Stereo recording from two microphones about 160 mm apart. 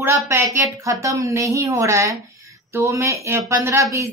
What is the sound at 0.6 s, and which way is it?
Speech, 20° right (ahead or behind).